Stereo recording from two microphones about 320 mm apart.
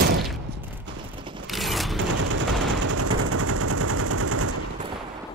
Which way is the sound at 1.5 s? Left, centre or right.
Centre.